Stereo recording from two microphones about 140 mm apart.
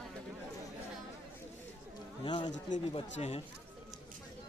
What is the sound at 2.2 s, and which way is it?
Speech, 35° left (ahead or behind).